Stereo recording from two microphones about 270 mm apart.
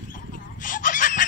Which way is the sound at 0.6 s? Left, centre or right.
Left.